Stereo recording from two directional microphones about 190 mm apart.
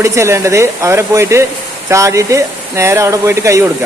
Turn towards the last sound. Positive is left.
turn(degrees=-15)  # may be behind; listen again after turning